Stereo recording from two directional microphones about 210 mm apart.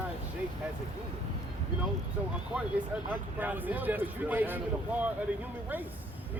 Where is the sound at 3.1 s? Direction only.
10° right (ahead or behind).